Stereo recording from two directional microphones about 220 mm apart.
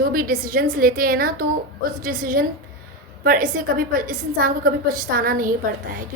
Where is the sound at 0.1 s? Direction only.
40° right (ahead or behind).